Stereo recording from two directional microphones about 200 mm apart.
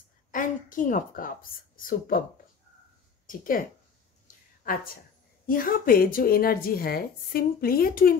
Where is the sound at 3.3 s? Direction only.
45° left (ahead or behind).